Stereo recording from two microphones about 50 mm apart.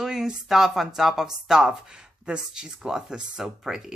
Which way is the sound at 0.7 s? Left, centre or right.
Centre.